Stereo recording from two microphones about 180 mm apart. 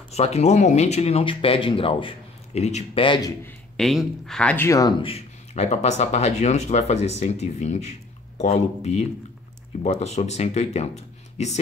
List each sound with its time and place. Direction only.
0.1 s speech: 35° left (ahead or behind)
3.4 s a man's voice: centre (ahead or behind)
4.6 s speech: 20° left (ahead or behind)
5.0 s speech: 35° left (ahead or behind)